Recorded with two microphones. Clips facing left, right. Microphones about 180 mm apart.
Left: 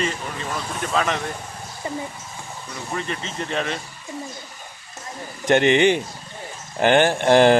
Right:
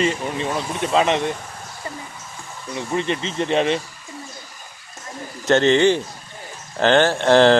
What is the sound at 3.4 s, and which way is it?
Speech, 30° right (ahead or behind).